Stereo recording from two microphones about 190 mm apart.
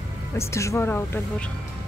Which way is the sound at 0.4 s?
15° left (ahead or behind).